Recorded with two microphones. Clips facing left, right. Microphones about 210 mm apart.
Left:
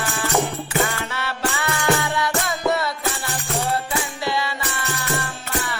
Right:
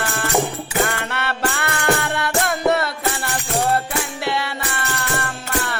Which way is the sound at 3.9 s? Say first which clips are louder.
Right 1 dB; 60° right (ahead or behind).